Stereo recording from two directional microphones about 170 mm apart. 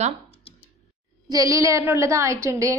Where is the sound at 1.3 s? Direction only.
20° right (ahead or behind).